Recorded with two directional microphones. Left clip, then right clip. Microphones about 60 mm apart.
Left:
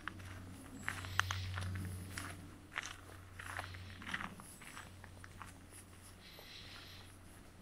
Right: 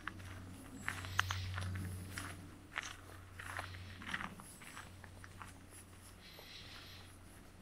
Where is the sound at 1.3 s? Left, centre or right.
Left.